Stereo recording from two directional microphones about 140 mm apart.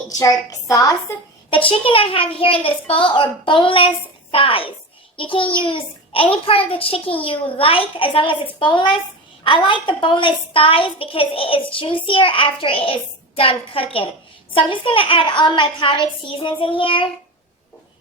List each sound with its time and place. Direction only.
0.2 s a woman's voice: 25° left (ahead or behind)
1.7 s a woman's voice: 40° left (ahead or behind)